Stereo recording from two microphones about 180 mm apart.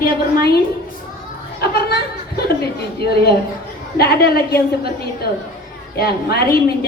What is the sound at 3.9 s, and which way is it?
Speech, 60° left (ahead or behind).